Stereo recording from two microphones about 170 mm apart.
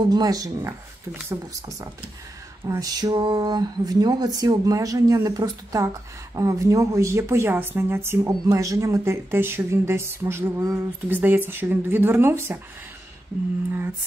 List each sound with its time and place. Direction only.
0.0 s speech: 25° right (ahead or behind)